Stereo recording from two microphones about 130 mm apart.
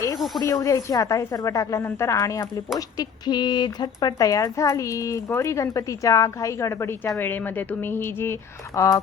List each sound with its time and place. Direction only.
0.4 s speech: 25° left (ahead or behind)